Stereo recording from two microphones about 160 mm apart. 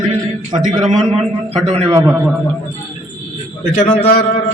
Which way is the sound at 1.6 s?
40° right (ahead or behind).